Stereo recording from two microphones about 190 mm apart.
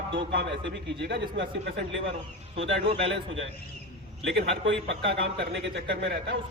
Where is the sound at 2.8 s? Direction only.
30° right (ahead or behind).